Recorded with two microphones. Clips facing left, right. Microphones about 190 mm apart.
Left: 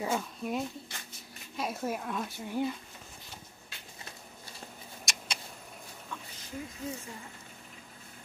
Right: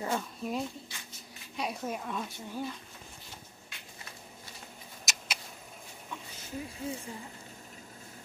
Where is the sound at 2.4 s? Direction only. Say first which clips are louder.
Left 8 dB; 15° left (ahead or behind).